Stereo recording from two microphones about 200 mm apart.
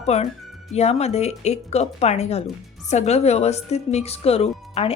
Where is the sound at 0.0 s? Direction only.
30° left (ahead or behind).